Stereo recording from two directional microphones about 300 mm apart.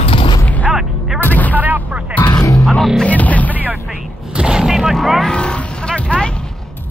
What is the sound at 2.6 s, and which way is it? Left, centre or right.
Music, centre.